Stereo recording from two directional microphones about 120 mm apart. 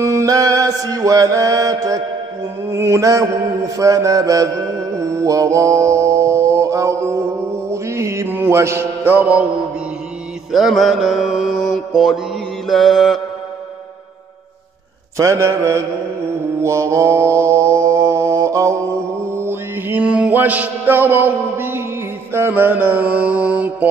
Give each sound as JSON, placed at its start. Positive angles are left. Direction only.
{"t": 0.0, "sound": "mantra", "side_deg": -25}
{"t": 10.5, "sound": "mantra", "side_deg": 0}
{"t": 15.1, "sound": "mantra", "side_deg": -25}